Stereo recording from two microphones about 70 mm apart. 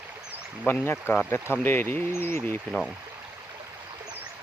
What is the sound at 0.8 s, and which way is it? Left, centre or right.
Speech, left.